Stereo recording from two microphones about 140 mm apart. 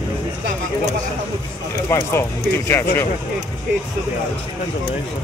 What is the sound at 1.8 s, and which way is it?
Speech, 20° left (ahead or behind).